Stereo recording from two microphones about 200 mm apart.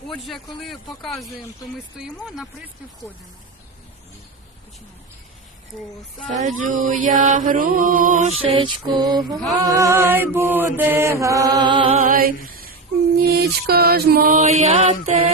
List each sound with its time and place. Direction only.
0.1 s speech: centre (ahead or behind)
2.2 s speech: centre (ahead or behind)
6.3 s chant: 40° right (ahead or behind); by 9.4 s 20° right (ahead or behind)
9.7 s mantra: 15° right (ahead or behind)
12.0 s a sound: 45° right (ahead or behind)
13.3 s mantra: 50° right (ahead or behind)
14.6 s chant: 35° right (ahead or behind)